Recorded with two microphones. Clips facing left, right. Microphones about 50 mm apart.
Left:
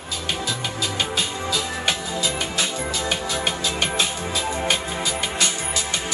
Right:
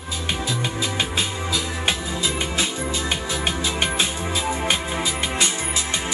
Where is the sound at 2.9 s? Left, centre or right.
Centre.